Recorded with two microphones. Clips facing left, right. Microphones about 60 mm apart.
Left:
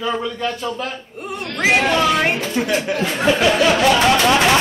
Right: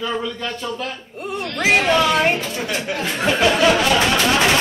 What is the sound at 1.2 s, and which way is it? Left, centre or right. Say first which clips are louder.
Music: left 1 dB; left.